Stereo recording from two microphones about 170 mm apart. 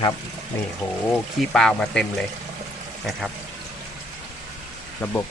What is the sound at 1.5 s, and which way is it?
Speech, 5° left (ahead or behind).